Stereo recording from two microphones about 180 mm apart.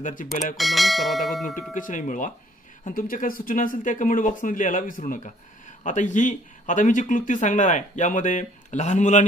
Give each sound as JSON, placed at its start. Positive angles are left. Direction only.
{"t": 0.0, "sound": "speech", "side_deg": 45}
{"t": 0.6, "sound": "speech", "side_deg": 0}
{"t": 1.7, "sound": "speech", "side_deg": 45}